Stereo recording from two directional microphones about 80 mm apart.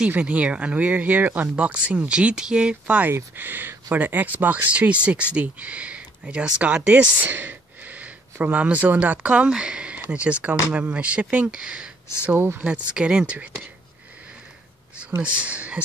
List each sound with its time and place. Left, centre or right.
0.1 s speech: centre
3.1 s speech: right
12.4 s speech: right
12.6 s speech: centre
15.3 s speech: centre